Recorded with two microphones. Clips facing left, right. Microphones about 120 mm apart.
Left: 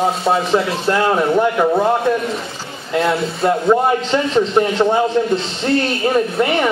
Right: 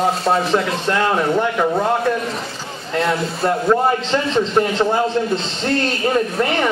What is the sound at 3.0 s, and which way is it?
Speech, centre (ahead or behind).